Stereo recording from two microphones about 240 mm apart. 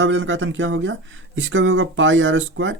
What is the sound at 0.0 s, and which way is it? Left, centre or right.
Speech, right.